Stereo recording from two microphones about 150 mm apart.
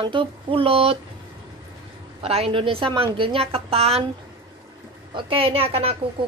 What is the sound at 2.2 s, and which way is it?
A woman's voice, 40° right (ahead or behind).